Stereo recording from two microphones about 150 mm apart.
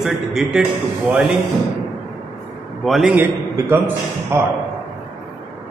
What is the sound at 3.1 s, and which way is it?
A man's voice, 15° right (ahead or behind).